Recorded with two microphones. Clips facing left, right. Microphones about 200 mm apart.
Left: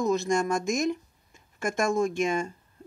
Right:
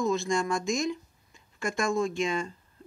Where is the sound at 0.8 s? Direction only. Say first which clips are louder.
Left 3 dB; 45° left (ahead or behind).